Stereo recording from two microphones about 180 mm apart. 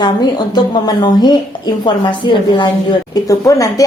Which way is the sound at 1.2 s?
25° left (ahead or behind).